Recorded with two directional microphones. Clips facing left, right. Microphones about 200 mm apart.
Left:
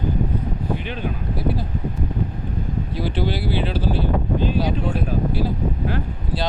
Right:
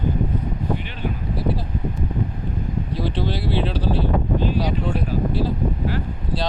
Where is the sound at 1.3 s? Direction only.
Centre (ahead or behind).